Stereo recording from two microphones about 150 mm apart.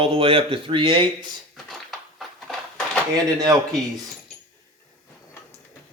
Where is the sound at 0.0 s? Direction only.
35° right (ahead or behind).